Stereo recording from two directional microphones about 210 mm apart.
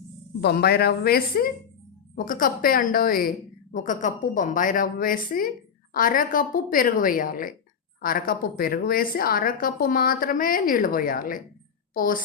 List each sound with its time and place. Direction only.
0.4 s a woman's voice: 50° left (ahead or behind)